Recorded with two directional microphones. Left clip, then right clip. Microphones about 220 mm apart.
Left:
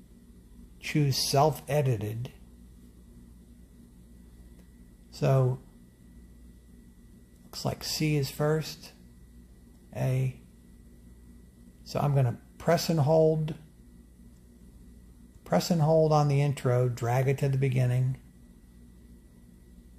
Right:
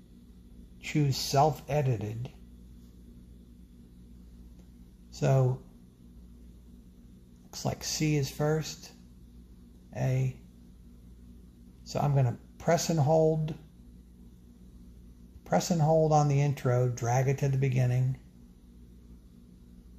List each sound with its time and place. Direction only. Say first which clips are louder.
0.8 s speech: left 3 dB; 20° left (ahead or behind)
5.1 s speech: left 1 dB; 10° left (ahead or behind)
7.5 s speech: left 1 dB; 10° left (ahead or behind)
9.9 s speech: left 1 dB; 10° left (ahead or behind)
11.8 s speech: left 1 dB; 10° left (ahead or behind)
15.4 s speech: left 1 dB; 10° left (ahead or behind)